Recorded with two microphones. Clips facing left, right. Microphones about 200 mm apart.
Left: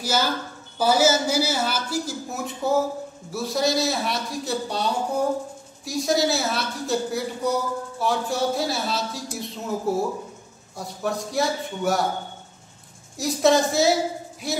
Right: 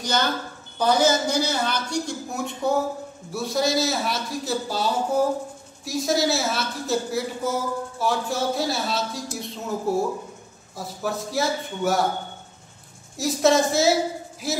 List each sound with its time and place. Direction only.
0.0 s a man's voice: 5° left (ahead or behind)
13.2 s a man's voice: centre (ahead or behind)